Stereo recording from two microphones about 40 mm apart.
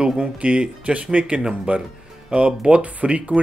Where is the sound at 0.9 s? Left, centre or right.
Right.